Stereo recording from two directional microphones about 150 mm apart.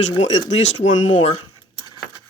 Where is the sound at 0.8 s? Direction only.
55° left (ahead or behind).